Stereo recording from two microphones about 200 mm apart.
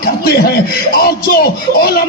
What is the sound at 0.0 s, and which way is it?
A man's voice, 50° left (ahead or behind).